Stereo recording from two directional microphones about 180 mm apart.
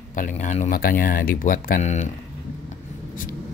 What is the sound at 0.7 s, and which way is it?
Speech, 55° left (ahead or behind).